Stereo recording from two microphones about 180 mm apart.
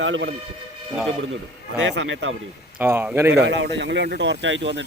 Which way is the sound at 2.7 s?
10° right (ahead or behind).